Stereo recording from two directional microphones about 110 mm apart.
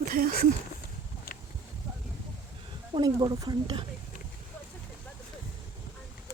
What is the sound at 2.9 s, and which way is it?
Speech, 40° right (ahead or behind).